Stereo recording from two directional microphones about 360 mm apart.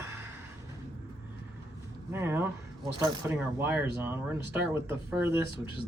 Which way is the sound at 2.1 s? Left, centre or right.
Centre.